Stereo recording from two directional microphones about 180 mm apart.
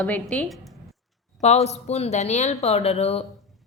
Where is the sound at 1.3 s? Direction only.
40° left (ahead or behind).